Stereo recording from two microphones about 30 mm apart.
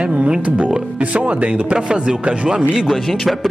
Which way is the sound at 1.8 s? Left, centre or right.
Right.